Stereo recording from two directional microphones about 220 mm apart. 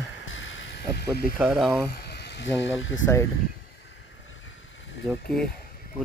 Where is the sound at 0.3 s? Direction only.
60° left (ahead or behind).